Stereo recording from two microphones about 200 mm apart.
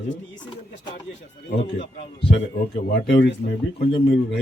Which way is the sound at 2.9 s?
60° left (ahead or behind).